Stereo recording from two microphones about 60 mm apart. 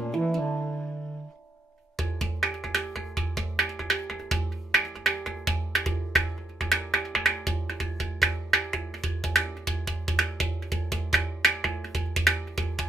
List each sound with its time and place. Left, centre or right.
0.0 s music: centre
0.5 s music: centre
2.0 s music: centre